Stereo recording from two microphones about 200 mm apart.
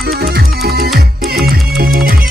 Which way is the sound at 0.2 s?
50° right (ahead or behind).